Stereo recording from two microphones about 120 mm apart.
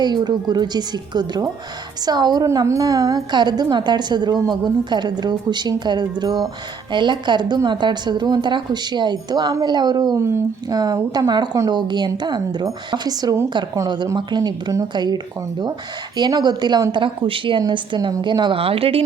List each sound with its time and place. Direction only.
0.0 s a woman's voice: 35° right (ahead or behind)
10.2 s speech: 20° right (ahead or behind)
10.8 s a woman's voice: 35° right (ahead or behind)
18.6 s speech: 50° right (ahead or behind)